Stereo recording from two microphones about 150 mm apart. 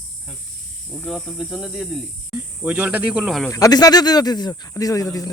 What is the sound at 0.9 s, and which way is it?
Speech, 5° left (ahead or behind).